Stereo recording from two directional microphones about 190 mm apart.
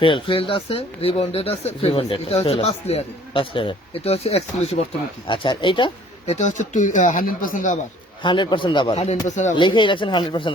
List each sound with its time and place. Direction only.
0.0 s speech: 25° left (ahead or behind)
6.3 s speech: 40° left (ahead or behind)
8.2 s speech: 25° left (ahead or behind)
9.2 s speech: 40° left (ahead or behind)
9.6 s speech: 25° left (ahead or behind)